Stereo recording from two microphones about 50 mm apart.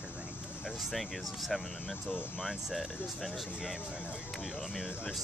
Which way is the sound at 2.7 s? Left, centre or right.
Centre.